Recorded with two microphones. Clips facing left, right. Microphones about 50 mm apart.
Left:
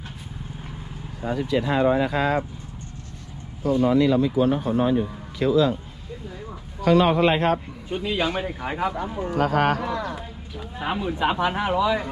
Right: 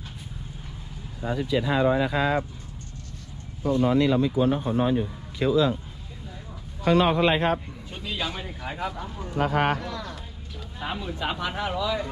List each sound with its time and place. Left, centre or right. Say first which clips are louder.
1.2 s speech: left 2 dB; left
3.7 s speech: left 2 dB; centre
4.1 s speech: left 2 dB; left
7.0 s a man's voice: left 2 dB; left
7.9 s speech: left 7 dB; left
9.3 s a man's voice: left 2 dB; left
10.0 s speech: left 7 dB; centre